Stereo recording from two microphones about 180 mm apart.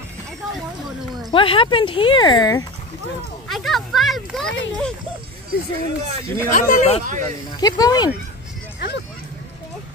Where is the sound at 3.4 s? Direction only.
Centre (ahead or behind).